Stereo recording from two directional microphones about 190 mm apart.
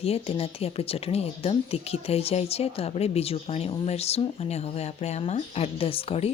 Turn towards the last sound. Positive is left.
turn(degrees=30)  # may be behind; listen again after turning